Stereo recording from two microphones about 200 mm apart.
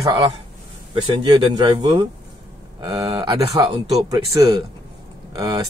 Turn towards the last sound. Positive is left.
turn(degrees=-20)  # may be behind; listen again after turning